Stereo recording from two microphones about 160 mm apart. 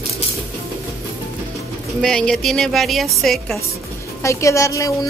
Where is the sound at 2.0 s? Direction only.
5° left (ahead or behind).